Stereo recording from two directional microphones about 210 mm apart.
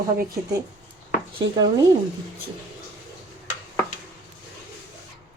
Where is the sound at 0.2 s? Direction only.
15° right (ahead or behind).